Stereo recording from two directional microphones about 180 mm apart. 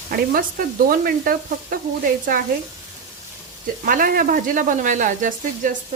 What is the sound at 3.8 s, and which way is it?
Speech, 50° right (ahead or behind).